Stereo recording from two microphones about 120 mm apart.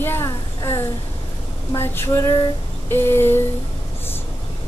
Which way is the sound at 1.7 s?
20° left (ahead or behind).